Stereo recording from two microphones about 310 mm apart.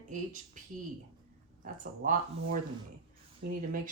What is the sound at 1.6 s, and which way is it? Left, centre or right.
A woman's voice, right.